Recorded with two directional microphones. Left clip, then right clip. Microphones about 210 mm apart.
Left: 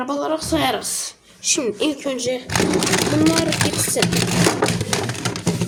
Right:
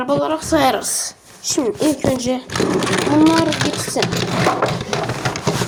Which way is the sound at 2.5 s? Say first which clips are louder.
Even; 40° left (ahead or behind).